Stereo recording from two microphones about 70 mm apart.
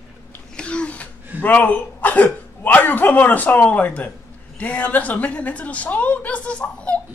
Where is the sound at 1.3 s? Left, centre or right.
Left.